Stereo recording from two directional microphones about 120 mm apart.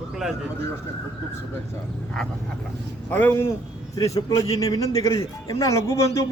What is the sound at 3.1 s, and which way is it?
A man's voice, 15° left (ahead or behind).